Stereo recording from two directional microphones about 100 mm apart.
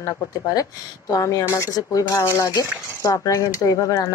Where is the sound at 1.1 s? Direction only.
35° left (ahead or behind).